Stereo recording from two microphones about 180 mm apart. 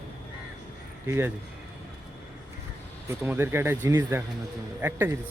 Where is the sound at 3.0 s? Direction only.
10° right (ahead or behind).